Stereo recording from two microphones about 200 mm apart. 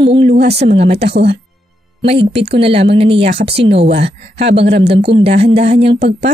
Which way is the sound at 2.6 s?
30° right (ahead or behind).